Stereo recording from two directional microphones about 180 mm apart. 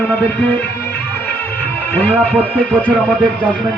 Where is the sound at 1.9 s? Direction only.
10° left (ahead or behind).